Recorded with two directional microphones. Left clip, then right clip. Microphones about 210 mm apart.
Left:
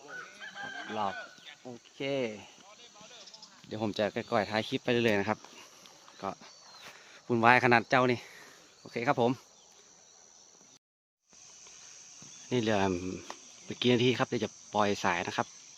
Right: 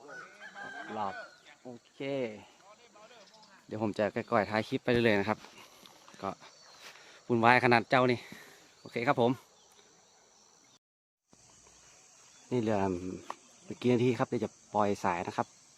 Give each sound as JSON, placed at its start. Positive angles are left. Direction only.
{"t": 0.9, "sound": "chicken", "side_deg": 45}
{"t": 1.6, "sound": "speech", "side_deg": 40}
{"t": 3.7, "sound": "speech", "side_deg": 0}
{"t": 12.5, "sound": "speech", "side_deg": 0}